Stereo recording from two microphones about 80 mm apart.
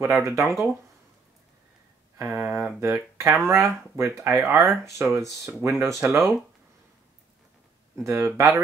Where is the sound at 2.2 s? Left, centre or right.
Right.